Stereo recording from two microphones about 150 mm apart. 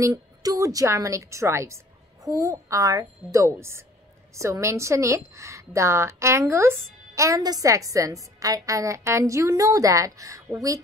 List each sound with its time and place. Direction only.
0.0 s a woman's voice: 25° right (ahead or behind)